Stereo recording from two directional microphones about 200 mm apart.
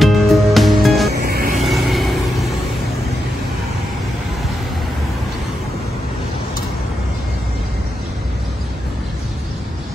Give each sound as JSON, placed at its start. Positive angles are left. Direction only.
{"t": 0.0, "sound": "music", "side_deg": 0}
{"t": 1.1, "sound": "music", "side_deg": -50}
{"t": 1.7, "sound": "vehicle", "side_deg": 0}